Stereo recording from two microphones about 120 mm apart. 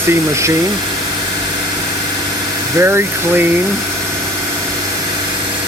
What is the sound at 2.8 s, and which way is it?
Speech, 20° right (ahead or behind).